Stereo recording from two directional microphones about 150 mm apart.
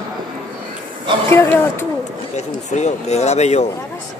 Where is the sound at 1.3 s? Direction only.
15° left (ahead or behind).